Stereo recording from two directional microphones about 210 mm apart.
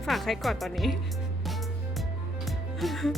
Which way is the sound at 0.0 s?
Centre (ahead or behind).